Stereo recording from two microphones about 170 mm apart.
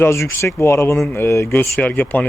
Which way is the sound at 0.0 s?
15° left (ahead or behind).